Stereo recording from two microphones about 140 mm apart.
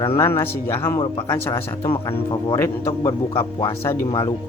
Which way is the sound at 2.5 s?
20° left (ahead or behind).